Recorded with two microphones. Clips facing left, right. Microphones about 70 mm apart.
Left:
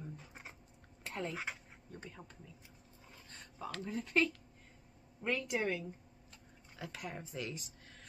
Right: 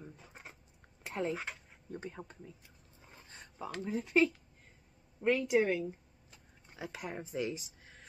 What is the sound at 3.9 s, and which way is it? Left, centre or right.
A woman's voice, centre.